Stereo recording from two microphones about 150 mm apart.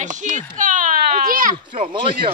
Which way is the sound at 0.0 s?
55° right (ahead or behind).